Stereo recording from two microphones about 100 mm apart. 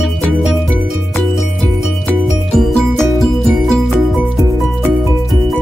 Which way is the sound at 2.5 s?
5° left (ahead or behind).